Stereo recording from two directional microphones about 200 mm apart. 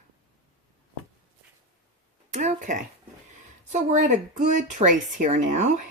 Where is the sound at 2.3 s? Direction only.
35° right (ahead or behind).